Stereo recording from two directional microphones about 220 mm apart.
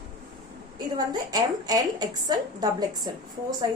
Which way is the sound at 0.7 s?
20° right (ahead or behind).